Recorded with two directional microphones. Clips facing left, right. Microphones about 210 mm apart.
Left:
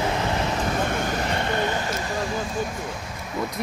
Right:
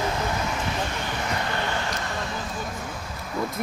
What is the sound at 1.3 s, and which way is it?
Vehicle, 20° left (ahead or behind).